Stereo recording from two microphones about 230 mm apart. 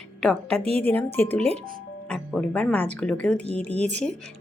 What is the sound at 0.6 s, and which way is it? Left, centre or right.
Speech, right.